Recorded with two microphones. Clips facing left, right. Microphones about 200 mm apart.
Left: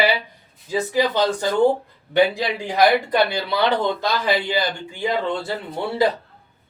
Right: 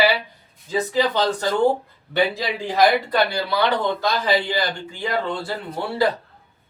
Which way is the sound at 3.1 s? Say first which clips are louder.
Left 1 dB; 25° left (ahead or behind).